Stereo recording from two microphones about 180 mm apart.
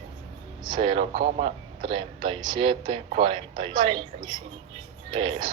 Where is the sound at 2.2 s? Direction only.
25° right (ahead or behind).